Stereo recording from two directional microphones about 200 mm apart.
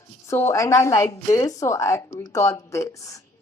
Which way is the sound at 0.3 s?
15° left (ahead or behind).